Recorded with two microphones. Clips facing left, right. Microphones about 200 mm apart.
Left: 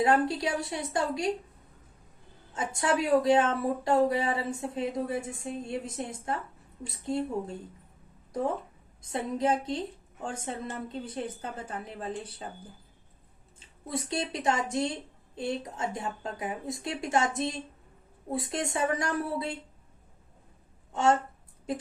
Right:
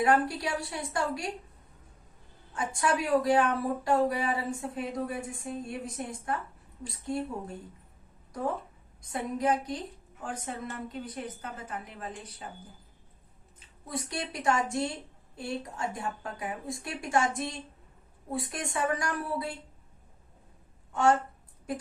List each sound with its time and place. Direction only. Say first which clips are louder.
0.0 s speech: left 1 dB; 25° left (ahead or behind)
2.5 s speech: left 1 dB; 25° left (ahead or behind)
9.0 s speech: left 2 dB; 25° left (ahead or behind)
13.6 s speech: left 2 dB; 25° left (ahead or behind)
20.9 s a woman's voice: even; 25° left (ahead or behind)